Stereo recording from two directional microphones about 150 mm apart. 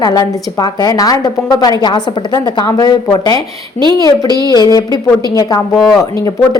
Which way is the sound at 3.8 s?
30° right (ahead or behind).